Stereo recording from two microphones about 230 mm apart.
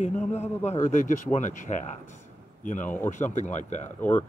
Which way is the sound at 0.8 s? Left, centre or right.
Left.